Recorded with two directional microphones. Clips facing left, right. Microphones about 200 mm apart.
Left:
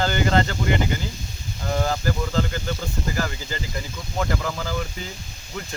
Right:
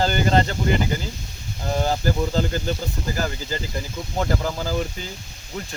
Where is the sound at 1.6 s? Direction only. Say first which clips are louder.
Right 2 dB; 30° right (ahead or behind).